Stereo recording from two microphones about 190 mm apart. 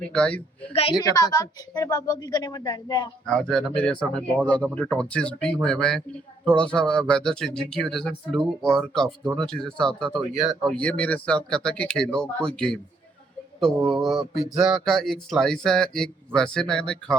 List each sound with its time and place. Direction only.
0.1 s a child's voice: 5° left (ahead or behind)
0.7 s a woman's voice: 30° left (ahead or behind)
3.2 s speech: 5° left (ahead or behind)